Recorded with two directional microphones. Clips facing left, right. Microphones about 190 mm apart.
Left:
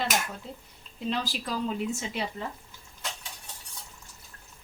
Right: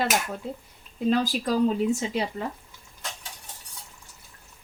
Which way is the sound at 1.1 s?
45° right (ahead or behind).